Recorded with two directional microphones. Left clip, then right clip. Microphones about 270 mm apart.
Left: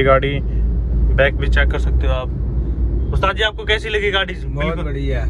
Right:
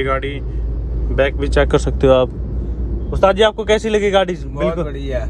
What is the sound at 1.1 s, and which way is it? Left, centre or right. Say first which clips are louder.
Speech: right 1 dB; centre.